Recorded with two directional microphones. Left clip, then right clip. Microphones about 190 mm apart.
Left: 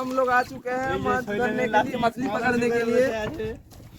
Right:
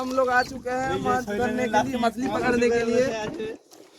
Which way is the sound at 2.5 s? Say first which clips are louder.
Right 1 dB; 60° left (ahead or behind).